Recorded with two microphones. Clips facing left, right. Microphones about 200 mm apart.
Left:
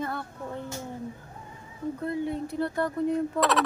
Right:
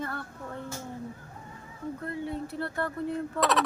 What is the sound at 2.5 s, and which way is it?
Speech, 15° left (ahead or behind).